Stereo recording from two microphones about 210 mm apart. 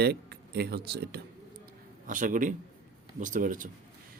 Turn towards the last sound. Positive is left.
turn(degrees=-40)  # may be behind; listen again after turning